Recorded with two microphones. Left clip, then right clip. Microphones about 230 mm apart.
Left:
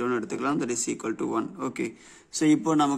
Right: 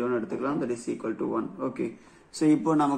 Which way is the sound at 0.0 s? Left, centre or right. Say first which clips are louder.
Left 1 dB; left.